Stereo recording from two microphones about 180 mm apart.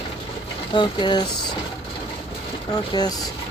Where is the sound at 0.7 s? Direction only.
25° left (ahead or behind).